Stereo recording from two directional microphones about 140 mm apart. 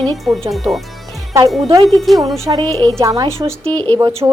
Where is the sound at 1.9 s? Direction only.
Centre (ahead or behind).